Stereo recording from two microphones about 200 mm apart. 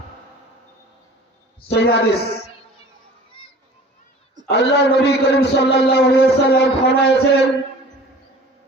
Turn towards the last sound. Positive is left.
turn(degrees=55)  # may be behind; listen again after turning